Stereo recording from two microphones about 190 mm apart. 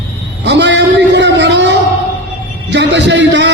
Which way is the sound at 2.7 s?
70° right (ahead or behind).